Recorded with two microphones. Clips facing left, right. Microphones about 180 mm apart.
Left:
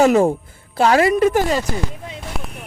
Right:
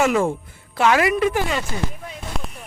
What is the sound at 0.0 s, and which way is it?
A woman's voice, 40° left (ahead or behind).